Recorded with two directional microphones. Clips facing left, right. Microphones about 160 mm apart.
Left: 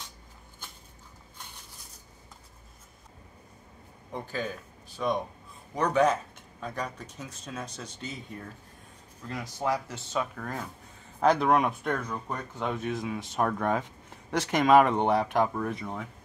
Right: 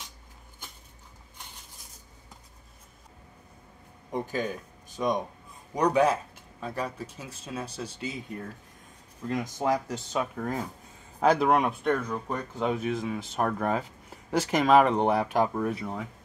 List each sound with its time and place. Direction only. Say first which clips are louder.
4.1 s speech: right 4 dB; 15° right (ahead or behind)
9.6 s speech: right 1 dB; 15° right (ahead or behind)